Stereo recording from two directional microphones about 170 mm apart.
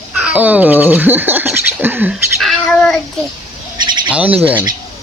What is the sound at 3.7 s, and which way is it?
Owl, 25° right (ahead or behind).